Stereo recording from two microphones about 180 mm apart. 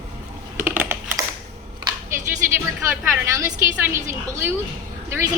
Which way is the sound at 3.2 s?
15° right (ahead or behind).